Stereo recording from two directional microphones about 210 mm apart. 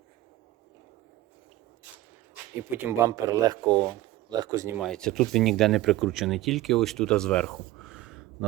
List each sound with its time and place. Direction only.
2.6 s speech: 10° right (ahead or behind)
4.8 s speech: 5° left (ahead or behind)
7.8 s a sound: 5° right (ahead or behind)